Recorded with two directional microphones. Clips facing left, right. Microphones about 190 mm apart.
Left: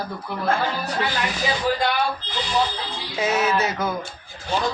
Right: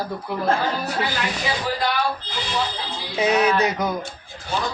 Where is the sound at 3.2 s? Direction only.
15° right (ahead or behind).